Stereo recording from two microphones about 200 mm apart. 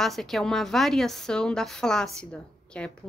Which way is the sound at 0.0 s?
Centre (ahead or behind).